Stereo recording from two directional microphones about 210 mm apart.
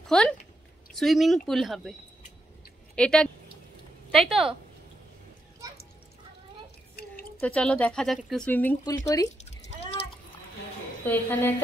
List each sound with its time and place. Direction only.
0.1 s speech: 5° left (ahead or behind)
3.0 s speech: 5° left (ahead or behind)
7.0 s a sound: 50° left (ahead or behind)
7.3 s speech: 5° left (ahead or behind)
9.4 s a sound: 30° left (ahead or behind)
11.1 s speech: 10° left (ahead or behind)